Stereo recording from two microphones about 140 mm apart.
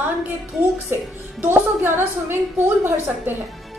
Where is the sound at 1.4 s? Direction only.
15° right (ahead or behind).